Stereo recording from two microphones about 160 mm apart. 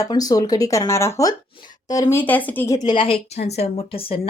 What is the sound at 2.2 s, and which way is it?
A woman's voice, 10° left (ahead or behind).